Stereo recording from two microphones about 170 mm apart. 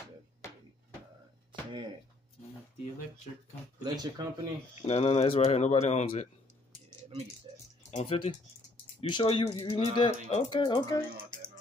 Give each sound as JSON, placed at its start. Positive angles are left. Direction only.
{"t": 1.5, "sound": "a sound", "side_deg": -30}
{"t": 3.8, "sound": "speech", "side_deg": -25}
{"t": 4.8, "sound": "speech", "side_deg": 35}
{"t": 7.5, "sound": "speech", "side_deg": -25}
{"t": 7.9, "sound": "speech", "side_deg": 35}